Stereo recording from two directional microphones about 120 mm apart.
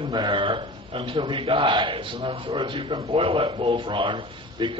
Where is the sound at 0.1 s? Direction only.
40° right (ahead or behind); by 3.6 s 55° right (ahead or behind).